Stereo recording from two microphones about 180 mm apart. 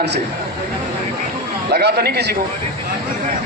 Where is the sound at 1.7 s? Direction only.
60° right (ahead or behind).